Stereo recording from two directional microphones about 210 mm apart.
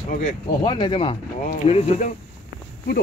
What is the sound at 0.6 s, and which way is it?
Speech, 20° left (ahead or behind).